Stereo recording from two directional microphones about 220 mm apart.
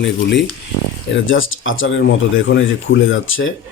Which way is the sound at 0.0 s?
55° left (ahead or behind).